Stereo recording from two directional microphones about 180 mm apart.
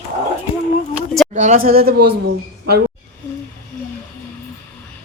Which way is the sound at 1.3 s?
45° right (ahead or behind).